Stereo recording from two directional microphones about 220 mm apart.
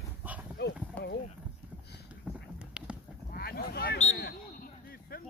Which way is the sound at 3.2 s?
45° left (ahead or behind).